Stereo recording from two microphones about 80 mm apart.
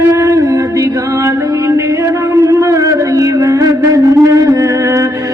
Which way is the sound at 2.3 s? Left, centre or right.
Right.